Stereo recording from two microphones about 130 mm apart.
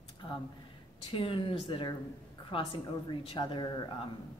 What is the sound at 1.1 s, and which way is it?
Speech, 40° left (ahead or behind).